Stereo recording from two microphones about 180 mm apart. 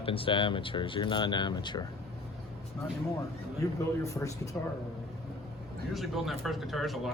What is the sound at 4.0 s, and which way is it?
Speech, 15° left (ahead or behind).